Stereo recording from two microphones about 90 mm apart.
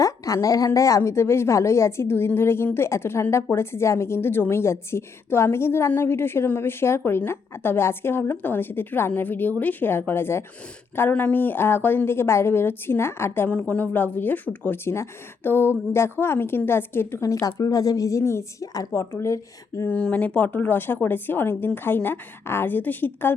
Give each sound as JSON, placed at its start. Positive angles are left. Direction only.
{"t": 0.4, "sound": "a woman's voice", "side_deg": 40}
{"t": 13.5, "sound": "a woman's voice", "side_deg": 15}
{"t": 17.4, "sound": "a woman's voice", "side_deg": 40}
{"t": 18.7, "sound": "a woman's voice", "side_deg": 40}
{"t": 19.9, "sound": "a woman's voice", "side_deg": 15}